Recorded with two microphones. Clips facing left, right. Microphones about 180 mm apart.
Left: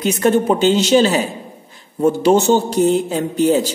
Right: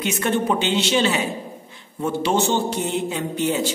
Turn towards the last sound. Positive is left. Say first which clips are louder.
# left 7 dB
turn(degrees=40)  # may be behind; listen again after turning